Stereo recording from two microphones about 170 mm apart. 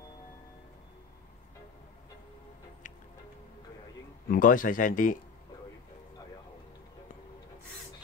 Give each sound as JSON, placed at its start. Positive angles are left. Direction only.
{"t": 4.3, "sound": "speech", "side_deg": 55}